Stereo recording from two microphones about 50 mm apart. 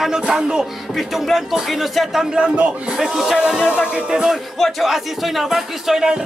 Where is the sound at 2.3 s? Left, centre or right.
Right.